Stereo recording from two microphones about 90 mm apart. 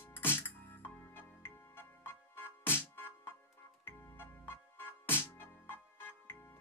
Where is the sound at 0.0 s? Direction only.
25° left (ahead or behind).